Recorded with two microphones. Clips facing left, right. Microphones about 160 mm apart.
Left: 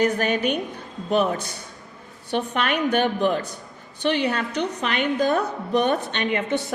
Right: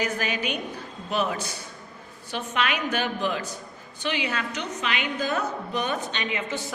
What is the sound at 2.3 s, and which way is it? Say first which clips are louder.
A woman's voice: left 4 dB; 55° left (ahead or behind).